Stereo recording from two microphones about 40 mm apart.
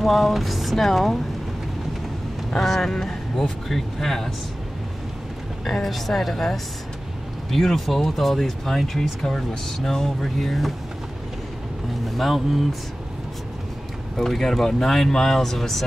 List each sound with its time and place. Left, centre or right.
0.0 s speech: centre
2.5 s speech: centre
5.7 s speech: centre
12.2 s speech: centre
14.1 s speech: centre